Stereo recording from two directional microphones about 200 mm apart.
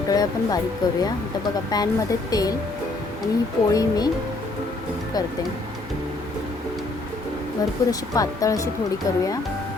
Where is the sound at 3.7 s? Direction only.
20° left (ahead or behind).